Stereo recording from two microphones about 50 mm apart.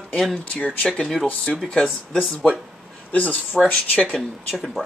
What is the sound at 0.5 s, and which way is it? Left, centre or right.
Speech, left.